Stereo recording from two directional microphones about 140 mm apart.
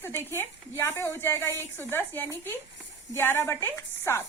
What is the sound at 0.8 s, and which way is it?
A woman's voice, 15° left (ahead or behind).